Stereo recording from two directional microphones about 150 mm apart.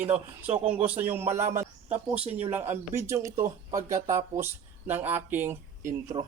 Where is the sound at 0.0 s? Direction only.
10° right (ahead or behind).